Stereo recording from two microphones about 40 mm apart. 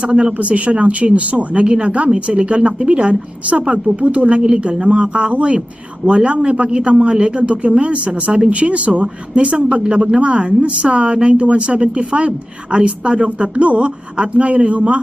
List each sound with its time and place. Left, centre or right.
0.0 s speech: right